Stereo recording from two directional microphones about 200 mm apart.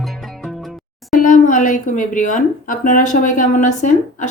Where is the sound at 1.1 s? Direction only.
40° left (ahead or behind).